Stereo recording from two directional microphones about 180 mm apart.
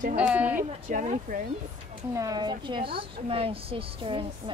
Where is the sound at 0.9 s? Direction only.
45° right (ahead or behind).